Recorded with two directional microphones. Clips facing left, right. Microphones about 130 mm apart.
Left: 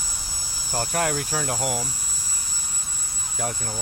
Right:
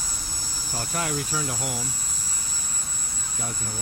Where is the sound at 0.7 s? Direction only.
55° left (ahead or behind).